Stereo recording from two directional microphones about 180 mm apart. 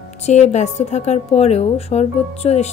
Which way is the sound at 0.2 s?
40° left (ahead or behind).